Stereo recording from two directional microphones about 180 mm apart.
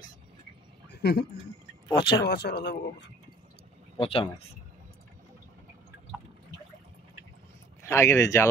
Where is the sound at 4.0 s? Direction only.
30° left (ahead or behind).